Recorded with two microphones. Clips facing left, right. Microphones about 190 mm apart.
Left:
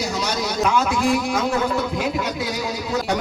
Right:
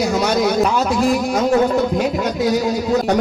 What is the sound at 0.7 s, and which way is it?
A man's voice, 40° right (ahead or behind).